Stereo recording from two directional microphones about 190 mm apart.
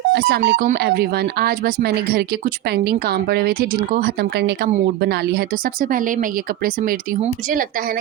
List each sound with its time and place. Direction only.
0.1 s speech: 60° right (ahead or behind)